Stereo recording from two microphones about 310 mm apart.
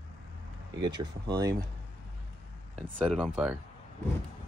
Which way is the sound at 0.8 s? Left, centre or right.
Centre.